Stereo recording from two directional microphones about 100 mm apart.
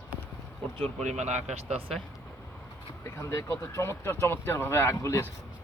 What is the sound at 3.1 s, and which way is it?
Speech, 30° left (ahead or behind).